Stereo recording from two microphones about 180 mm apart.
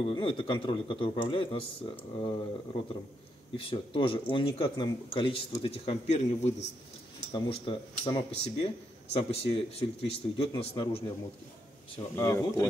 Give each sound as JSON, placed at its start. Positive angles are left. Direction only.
{"t": 0.0, "sound": "speech", "side_deg": 30}
{"t": 12.2, "sound": "speech", "side_deg": 15}